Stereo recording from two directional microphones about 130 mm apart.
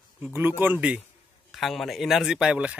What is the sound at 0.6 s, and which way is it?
Speech, 10° right (ahead or behind).